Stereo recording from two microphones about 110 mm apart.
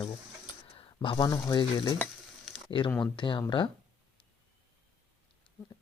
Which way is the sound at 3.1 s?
45° left (ahead or behind).